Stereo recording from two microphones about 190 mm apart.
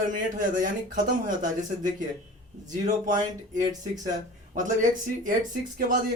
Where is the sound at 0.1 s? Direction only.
45° right (ahead or behind).